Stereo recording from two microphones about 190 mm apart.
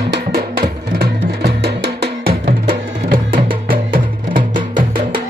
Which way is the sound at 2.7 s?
45° right (ahead or behind).